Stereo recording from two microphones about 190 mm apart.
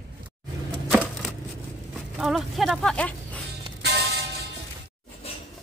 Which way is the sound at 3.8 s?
60° right (ahead or behind).